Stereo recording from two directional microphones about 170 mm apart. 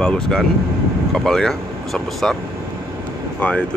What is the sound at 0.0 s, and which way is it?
Speech, 5° left (ahead or behind).